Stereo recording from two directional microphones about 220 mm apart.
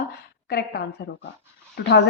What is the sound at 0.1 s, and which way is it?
Speech, 45° left (ahead or behind).